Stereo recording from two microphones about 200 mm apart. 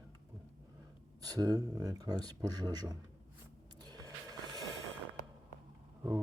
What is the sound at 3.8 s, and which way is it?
Music, 20° right (ahead or behind).